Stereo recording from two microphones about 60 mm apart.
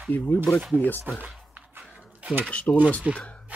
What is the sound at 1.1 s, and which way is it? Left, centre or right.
Speech, right.